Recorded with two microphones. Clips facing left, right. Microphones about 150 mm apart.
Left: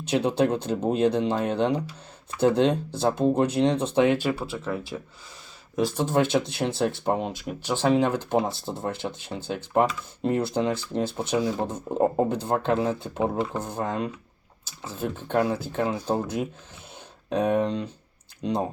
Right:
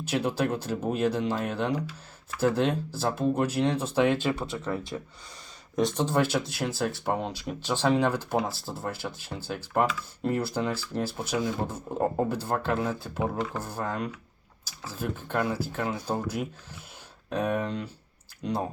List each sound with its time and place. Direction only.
0.1 s speech: 25° left (ahead or behind); by 6.1 s 5° left (ahead or behind)
6.1 s speech: 20° left (ahead or behind)
17.2 s speech: 20° left (ahead or behind)